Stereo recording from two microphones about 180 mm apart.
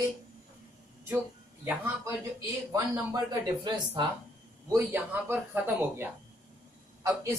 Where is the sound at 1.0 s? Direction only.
10° right (ahead or behind).